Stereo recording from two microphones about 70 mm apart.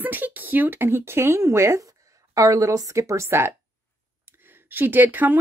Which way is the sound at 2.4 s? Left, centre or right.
Right.